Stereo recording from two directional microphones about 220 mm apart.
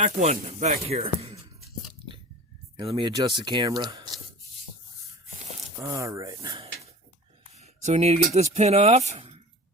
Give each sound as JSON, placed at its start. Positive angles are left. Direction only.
{"t": 0.0, "sound": "speech", "side_deg": -30}
{"t": 2.7, "sound": "speech", "side_deg": -25}
{"t": 5.8, "sound": "speech", "side_deg": -15}
{"t": 7.5, "sound": "speech", "side_deg": -30}